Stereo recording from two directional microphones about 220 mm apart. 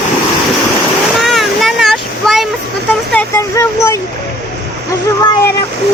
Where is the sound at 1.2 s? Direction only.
Centre (ahead or behind).